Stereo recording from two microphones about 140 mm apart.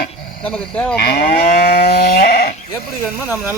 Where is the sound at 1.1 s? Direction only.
90° left.